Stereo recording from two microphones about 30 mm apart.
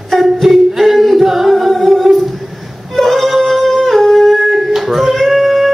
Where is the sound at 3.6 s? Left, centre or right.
Centre.